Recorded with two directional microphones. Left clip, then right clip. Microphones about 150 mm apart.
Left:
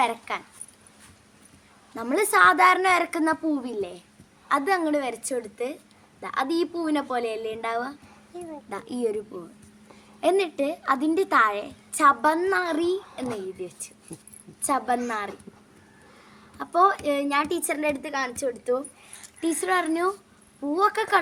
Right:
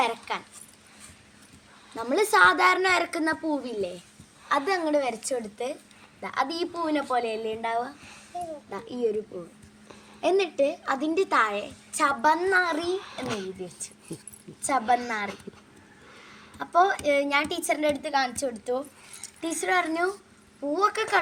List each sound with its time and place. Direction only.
0.0 s speech: 5° left (ahead or behind)
2.0 s a woman's voice: 10° left (ahead or behind)
10.2 s a woman's voice: 15° left (ahead or behind)
13.2 s speech: 5° right (ahead or behind)
14.6 s a woman's voice: 20° left (ahead or behind)
16.6 s a woman's voice: 15° left (ahead or behind)